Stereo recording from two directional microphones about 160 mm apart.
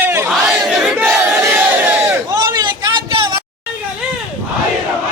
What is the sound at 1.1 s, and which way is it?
Battle cry, 10° right (ahead or behind).